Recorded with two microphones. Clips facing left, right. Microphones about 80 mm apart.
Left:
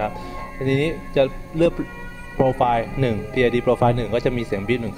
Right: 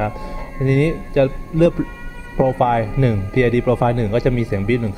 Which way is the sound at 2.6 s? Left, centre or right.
Right.